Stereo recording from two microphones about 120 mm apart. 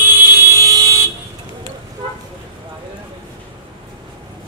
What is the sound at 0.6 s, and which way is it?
Vehicle, 25° right (ahead or behind).